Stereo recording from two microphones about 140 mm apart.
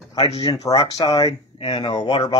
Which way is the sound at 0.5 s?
25° left (ahead or behind).